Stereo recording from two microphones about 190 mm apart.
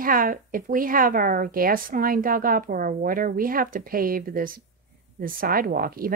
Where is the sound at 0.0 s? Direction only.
45° right (ahead or behind).